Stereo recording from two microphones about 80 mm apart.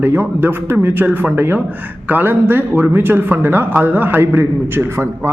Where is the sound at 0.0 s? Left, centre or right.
Right.